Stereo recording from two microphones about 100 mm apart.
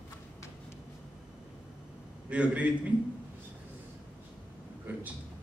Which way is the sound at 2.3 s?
10° right (ahead or behind).